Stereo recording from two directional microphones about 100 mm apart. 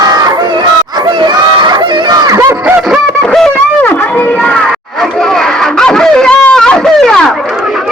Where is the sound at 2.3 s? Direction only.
30° right (ahead or behind).